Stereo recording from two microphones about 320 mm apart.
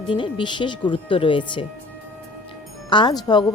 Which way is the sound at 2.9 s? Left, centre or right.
Centre.